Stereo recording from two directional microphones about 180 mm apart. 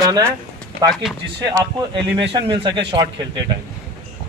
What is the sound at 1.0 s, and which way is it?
Speech, centre (ahead or behind).